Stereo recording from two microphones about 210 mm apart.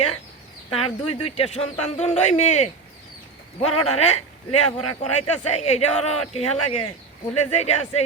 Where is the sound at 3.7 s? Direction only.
90° left.